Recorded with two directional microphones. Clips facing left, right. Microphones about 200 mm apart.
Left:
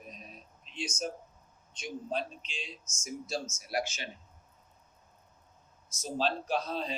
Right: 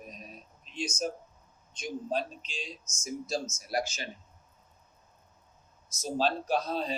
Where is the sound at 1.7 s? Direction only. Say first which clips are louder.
Right 3 dB; 40° right (ahead or behind).